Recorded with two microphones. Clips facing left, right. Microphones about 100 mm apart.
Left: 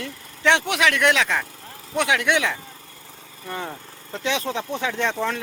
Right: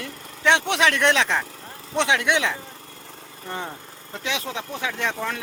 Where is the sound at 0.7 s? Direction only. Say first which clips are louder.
Even; 30° right (ahead or behind).